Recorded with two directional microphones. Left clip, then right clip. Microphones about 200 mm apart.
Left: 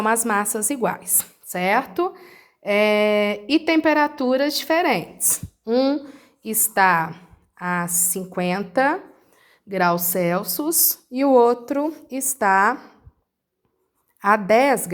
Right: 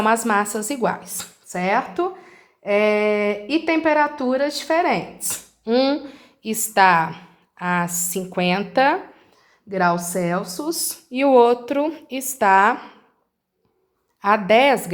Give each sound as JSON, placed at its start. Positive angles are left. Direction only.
{"t": 0.0, "sound": "speech", "side_deg": 30}
{"t": 5.6, "sound": "a woman's voice", "side_deg": 25}
{"t": 9.6, "sound": "a woman's voice", "side_deg": 40}
{"t": 14.2, "sound": "a woman's voice", "side_deg": 35}